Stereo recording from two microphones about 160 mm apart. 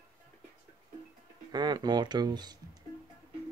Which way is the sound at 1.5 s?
25° right (ahead or behind).